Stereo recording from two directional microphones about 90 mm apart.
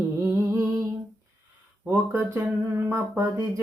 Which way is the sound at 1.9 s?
25° right (ahead or behind).